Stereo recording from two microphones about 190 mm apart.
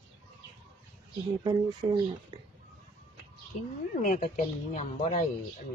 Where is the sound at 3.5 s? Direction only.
45° left (ahead or behind).